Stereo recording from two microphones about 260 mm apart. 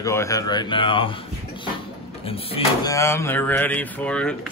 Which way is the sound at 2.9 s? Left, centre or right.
Centre.